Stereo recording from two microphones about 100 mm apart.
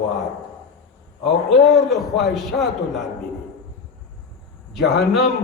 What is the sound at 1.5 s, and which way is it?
A man's voice, centre (ahead or behind).